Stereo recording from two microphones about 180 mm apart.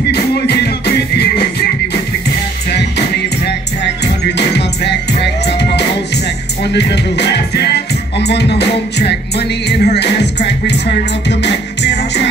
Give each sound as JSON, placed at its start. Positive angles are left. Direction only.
{"t": 0.1, "sound": "music", "side_deg": 65}
{"t": 4.4, "sound": "music", "side_deg": 70}